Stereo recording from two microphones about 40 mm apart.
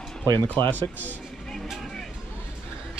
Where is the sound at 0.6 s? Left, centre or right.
Left.